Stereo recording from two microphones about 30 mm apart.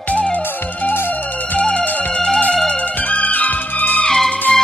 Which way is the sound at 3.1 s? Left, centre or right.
Left.